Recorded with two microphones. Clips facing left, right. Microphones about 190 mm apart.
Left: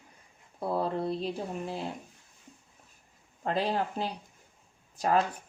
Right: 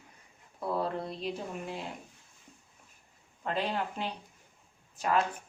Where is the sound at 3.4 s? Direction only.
35° left (ahead or behind).